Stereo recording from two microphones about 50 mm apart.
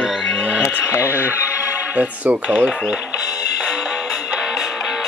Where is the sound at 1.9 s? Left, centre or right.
Right.